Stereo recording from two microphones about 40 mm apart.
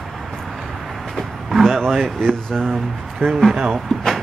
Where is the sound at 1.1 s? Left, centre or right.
Centre.